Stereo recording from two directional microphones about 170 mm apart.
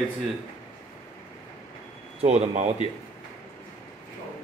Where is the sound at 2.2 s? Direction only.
40° right (ahead or behind).